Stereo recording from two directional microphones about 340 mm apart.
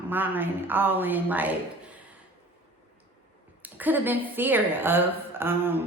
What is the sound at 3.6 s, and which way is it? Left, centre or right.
A woman's voice, centre.